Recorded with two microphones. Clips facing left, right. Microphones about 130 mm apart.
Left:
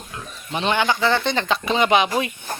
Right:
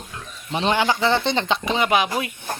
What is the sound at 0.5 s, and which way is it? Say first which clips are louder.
Speech: even; 30° right (ahead or behind).